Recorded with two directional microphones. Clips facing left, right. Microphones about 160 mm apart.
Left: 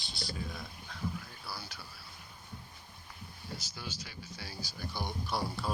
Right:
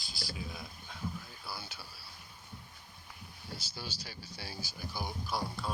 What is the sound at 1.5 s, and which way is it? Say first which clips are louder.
Speech: even; 25° right (ahead or behind).